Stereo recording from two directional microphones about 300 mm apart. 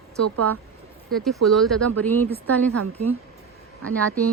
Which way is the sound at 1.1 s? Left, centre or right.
Centre.